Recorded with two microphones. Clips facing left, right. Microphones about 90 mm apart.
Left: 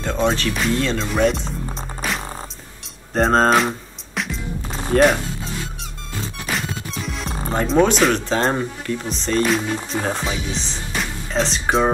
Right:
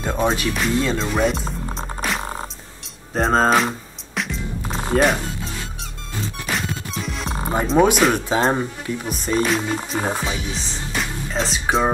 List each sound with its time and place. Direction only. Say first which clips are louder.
0.0 s speech: left 1 dB; 10° right (ahead or behind)
1.8 s music: right 2 dB; centre (ahead or behind)
4.9 s speech: left 3 dB; 5° right (ahead or behind)
6.4 s speech: left 1 dB; centre (ahead or behind)